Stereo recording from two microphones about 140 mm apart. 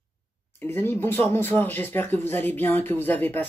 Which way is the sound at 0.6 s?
15° left (ahead or behind).